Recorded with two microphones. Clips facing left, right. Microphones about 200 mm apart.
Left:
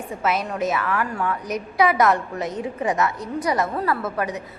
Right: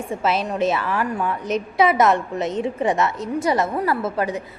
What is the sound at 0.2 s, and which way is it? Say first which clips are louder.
A woman's voice: right 2 dB; 30° right (ahead or behind).